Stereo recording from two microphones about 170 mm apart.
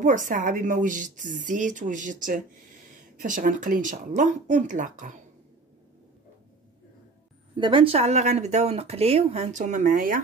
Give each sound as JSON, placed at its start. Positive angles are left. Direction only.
{"t": 0.0, "sound": "speech", "side_deg": -50}
{"t": 7.5, "sound": "speech", "side_deg": -30}